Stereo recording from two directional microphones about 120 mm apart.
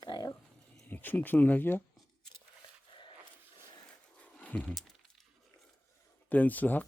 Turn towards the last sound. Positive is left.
turn(degrees=15)  # may be behind; listen again after turning